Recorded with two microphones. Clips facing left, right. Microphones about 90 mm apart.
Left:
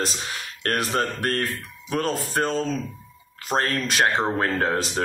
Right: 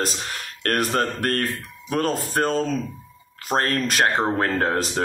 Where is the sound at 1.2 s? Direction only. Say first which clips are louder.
Right 1 dB; 45° right (ahead or behind).